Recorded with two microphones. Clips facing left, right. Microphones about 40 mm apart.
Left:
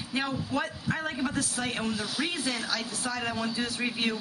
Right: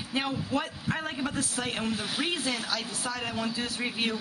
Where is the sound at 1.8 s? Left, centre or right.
Right.